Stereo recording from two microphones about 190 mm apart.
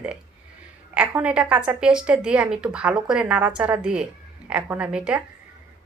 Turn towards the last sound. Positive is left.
turn(degrees=-5)  # may be behind; listen again after turning